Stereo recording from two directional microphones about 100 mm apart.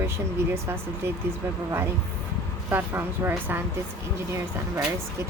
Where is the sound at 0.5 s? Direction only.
25° right (ahead or behind).